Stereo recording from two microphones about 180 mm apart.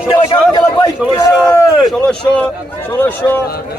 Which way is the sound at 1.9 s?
5° left (ahead or behind).